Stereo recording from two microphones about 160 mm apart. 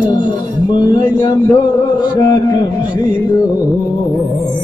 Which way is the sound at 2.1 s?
25° left (ahead or behind).